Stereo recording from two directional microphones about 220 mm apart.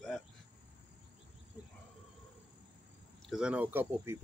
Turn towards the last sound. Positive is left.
turn(degrees=-10)  # may be behind; listen again after turning